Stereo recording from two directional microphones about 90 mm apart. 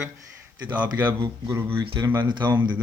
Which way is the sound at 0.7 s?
20° right (ahead or behind).